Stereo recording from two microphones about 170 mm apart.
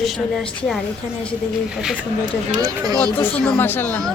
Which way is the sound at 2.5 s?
20° right (ahead or behind).